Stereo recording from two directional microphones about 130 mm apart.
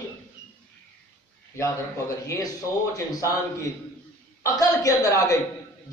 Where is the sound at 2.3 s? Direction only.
25° left (ahead or behind).